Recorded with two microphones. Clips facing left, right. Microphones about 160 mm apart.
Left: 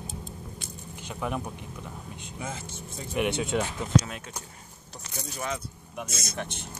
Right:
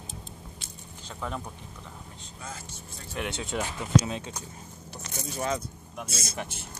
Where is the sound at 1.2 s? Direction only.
10° left (ahead or behind).